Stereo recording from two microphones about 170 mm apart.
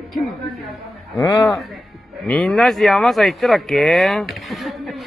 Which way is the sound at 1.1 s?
20° left (ahead or behind).